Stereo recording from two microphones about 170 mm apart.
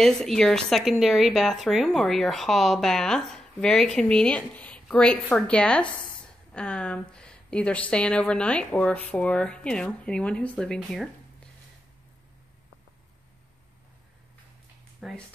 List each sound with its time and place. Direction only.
0.0 s speech: 5° left (ahead or behind)
15.0 s speech: centre (ahead or behind)